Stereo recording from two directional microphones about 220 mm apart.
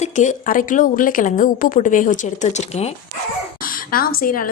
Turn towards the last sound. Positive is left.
turn(degrees=40)  # may be behind; listen again after turning